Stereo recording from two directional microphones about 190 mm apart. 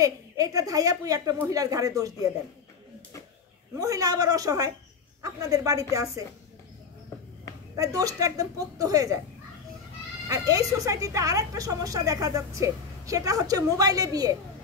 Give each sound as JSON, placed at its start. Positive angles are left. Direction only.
{"t": 0.0, "sound": "a woman's voice", "side_deg": -20}
{"t": 3.8, "sound": "a woman's voice", "side_deg": -20}
{"t": 7.7, "sound": "a woman's voice", "side_deg": -20}
{"t": 10.2, "sound": "a woman's voice", "side_deg": -15}